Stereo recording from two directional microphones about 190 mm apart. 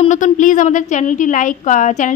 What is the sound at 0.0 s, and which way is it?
A woman's voice, 40° left (ahead or behind).